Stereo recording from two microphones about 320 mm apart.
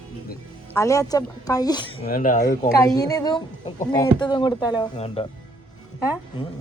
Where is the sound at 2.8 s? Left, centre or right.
Centre.